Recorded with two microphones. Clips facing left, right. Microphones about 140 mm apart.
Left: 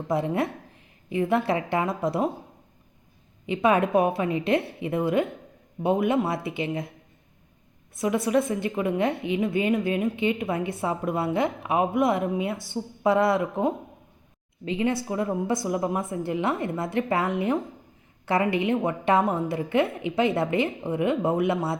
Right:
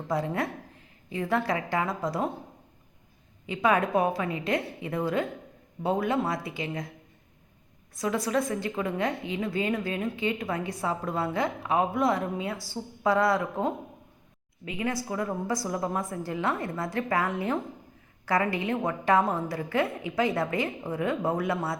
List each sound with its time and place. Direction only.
0.1 s a woman's voice: 25° left (ahead or behind)
3.4 s a woman's voice: 20° left (ahead or behind)
7.9 s a woman's voice: 25° left (ahead or behind)